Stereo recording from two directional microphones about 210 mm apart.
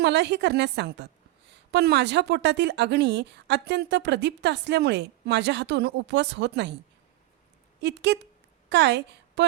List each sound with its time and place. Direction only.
0.0 s a woman's voice: 55° right (ahead or behind)
7.8 s a woman's voice: 55° right (ahead or behind)